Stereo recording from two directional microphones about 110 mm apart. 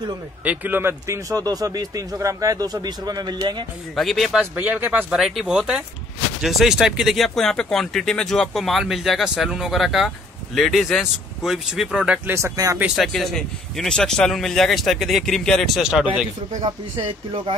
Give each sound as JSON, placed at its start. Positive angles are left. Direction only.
{"t": 0.4, "sound": "speech", "side_deg": -15}
{"t": 3.9, "sound": "speech", "side_deg": 0}
{"t": 4.6, "sound": "speech", "side_deg": -20}
{"t": 5.1, "sound": "speech", "side_deg": 0}
{"t": 12.4, "sound": "speech", "side_deg": -25}
{"t": 12.9, "sound": "speech", "side_deg": 0}
{"t": 16.6, "sound": "speech", "side_deg": -50}